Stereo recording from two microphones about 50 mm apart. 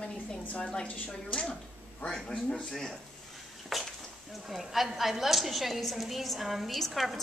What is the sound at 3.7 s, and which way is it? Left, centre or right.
A woman's voice, centre.